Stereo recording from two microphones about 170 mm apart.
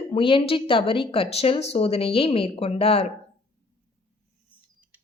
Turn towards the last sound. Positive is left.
turn(degrees=35)  # may be behind; listen again after turning